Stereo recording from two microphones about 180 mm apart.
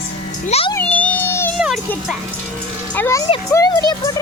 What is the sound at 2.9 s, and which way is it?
Speech, 15° left (ahead or behind).